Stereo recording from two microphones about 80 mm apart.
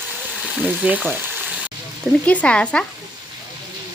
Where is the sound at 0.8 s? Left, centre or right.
Centre.